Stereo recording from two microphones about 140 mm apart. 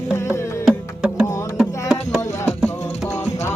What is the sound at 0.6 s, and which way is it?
Music, 5° right (ahead or behind).